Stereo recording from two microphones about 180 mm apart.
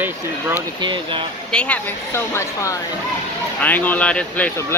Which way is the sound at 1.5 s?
5° left (ahead or behind).